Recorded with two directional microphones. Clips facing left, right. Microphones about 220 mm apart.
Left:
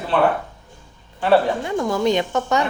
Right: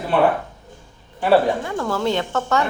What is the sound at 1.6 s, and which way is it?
A woman's voice, 15° left (ahead or behind).